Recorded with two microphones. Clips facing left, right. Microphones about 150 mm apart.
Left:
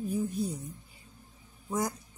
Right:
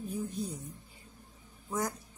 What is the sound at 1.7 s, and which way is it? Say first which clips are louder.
Speech: left 2 dB; 15° left (ahead or behind).